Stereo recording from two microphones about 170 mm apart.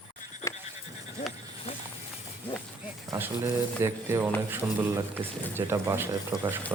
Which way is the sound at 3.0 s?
15° right (ahead or behind).